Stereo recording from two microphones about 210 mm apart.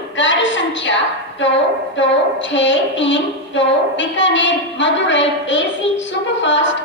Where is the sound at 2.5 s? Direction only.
60° left (ahead or behind).